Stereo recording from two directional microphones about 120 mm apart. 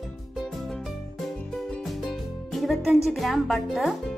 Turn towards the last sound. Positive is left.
turn(degrees=0)  # may be behind; listen again after turning